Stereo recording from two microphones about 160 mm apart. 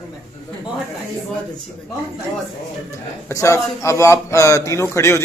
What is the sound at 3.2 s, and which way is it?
Speech, 20° left (ahead or behind).